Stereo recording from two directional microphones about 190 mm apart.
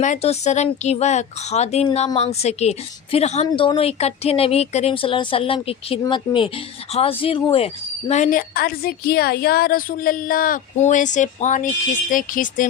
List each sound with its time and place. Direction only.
0.0 s a woman's voice: 35° left (ahead or behind)